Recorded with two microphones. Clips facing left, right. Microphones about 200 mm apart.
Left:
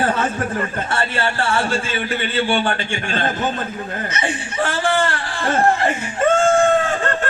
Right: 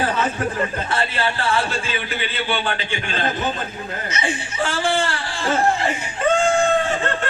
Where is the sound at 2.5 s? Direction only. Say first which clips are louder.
Left 4 dB; 50° left (ahead or behind).